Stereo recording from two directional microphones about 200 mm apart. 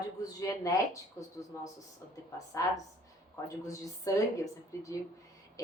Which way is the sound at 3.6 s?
15° left (ahead or behind).